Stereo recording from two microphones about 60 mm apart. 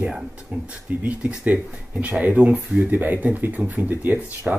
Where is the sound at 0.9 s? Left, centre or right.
Right.